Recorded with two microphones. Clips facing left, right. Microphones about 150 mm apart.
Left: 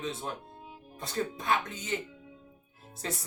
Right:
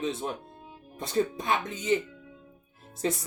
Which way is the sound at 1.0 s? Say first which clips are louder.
Right 6 dB; 20° right (ahead or behind).